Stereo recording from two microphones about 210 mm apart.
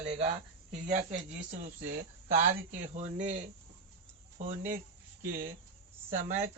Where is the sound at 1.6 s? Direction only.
35° right (ahead or behind).